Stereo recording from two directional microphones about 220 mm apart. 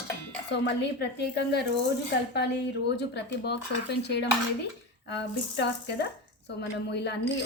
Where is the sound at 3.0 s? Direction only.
50° left (ahead or behind).